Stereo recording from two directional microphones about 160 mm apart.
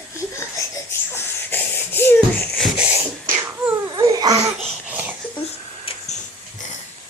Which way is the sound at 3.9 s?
25° right (ahead or behind).